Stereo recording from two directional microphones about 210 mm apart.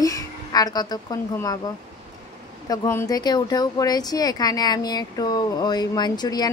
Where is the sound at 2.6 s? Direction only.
15° left (ahead or behind).